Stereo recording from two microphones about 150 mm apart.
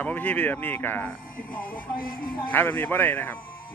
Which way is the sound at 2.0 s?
70° left (ahead or behind).